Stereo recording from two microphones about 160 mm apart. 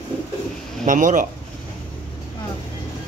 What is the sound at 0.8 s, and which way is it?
Speech, 55° right (ahead or behind).